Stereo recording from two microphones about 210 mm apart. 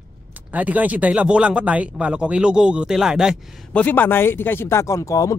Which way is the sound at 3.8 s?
10° left (ahead or behind).